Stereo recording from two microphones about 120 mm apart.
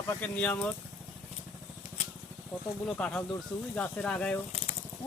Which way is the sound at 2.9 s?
10° left (ahead or behind).